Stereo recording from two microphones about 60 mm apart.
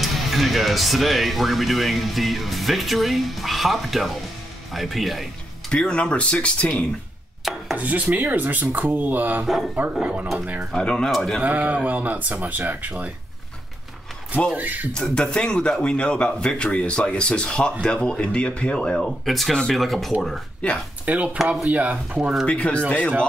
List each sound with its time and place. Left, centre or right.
0.0 s speech: centre
5.7 s speech: centre
7.7 s speech: right
10.7 s speech: centre
11.4 s speech: right
14.5 s speech: right
14.9 s speech: centre
21.0 s speech: right
22.5 s speech: centre